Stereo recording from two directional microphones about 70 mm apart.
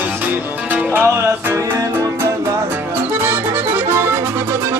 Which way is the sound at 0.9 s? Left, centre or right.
Right.